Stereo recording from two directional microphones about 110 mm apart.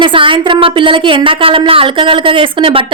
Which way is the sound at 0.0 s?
50° right (ahead or behind).